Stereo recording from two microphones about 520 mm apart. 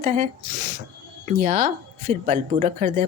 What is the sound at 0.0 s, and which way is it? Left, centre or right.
Speech, centre.